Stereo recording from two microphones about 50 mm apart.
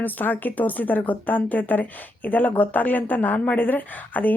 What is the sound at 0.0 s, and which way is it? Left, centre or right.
Speech, left.